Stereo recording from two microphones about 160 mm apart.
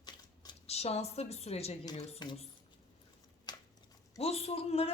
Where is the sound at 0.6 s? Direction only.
40° left (ahead or behind).